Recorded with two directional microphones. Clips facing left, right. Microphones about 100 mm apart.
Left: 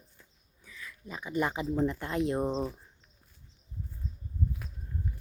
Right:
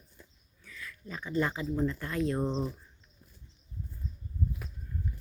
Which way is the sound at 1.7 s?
20° left (ahead or behind).